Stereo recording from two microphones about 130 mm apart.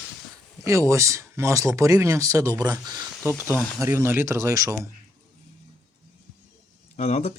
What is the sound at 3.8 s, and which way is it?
Speech, 20° right (ahead or behind).